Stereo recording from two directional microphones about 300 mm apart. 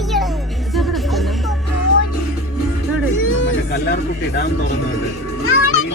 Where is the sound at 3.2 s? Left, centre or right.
Left.